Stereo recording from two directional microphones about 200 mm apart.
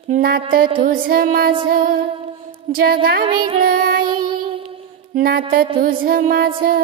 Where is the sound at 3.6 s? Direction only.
45° right (ahead or behind).